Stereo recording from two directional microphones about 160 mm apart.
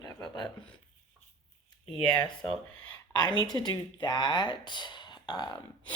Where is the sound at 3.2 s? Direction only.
25° left (ahead or behind).